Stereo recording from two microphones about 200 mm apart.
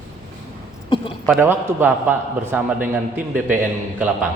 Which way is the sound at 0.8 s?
25° left (ahead or behind).